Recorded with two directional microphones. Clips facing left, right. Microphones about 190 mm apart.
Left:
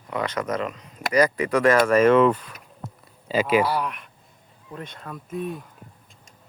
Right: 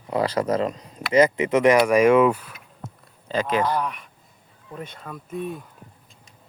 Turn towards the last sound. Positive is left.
turn(degrees=0)  # may be behind; listen again after turning